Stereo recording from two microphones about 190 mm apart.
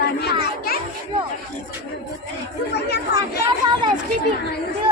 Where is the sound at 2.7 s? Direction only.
60° left (ahead or behind).